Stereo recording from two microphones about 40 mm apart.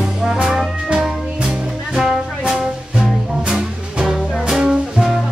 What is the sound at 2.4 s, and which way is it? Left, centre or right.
Music, centre.